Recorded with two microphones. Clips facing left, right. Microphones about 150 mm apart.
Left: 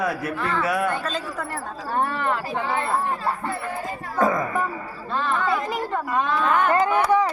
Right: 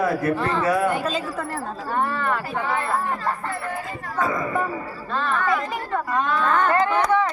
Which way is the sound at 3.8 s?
45° left (ahead or behind).